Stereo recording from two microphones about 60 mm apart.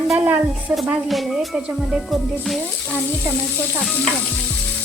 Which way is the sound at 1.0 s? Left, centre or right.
Centre.